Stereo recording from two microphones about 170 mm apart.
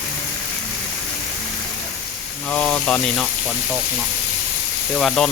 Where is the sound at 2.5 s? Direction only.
10° left (ahead or behind).